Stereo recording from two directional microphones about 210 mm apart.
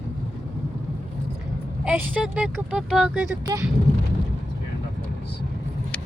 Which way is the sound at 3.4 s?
15° right (ahead or behind).